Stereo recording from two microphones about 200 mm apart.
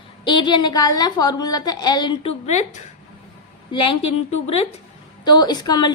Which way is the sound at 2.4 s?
35° left (ahead or behind).